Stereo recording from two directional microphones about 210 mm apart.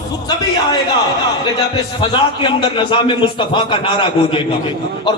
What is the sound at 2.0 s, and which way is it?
A man's voice, 20° left (ahead or behind).